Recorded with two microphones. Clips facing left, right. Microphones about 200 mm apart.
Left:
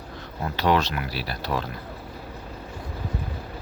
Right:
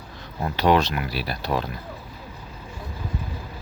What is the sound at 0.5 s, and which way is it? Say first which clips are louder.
Speech: right 3 dB; 15° right (ahead or behind).